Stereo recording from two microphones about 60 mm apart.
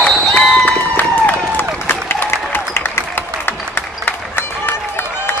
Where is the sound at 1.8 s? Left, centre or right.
Left.